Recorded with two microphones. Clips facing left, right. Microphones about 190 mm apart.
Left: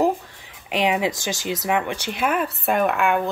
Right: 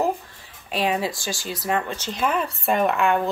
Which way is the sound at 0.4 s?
20° left (ahead or behind).